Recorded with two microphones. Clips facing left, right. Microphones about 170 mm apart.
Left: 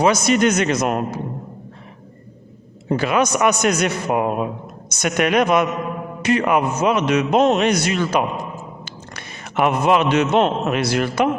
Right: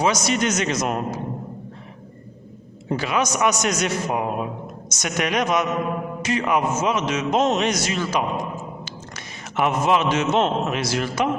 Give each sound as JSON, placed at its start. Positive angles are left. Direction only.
{"t": 0.0, "sound": "a man's voice", "side_deg": 55}
{"t": 2.9, "sound": "a man's voice", "side_deg": 55}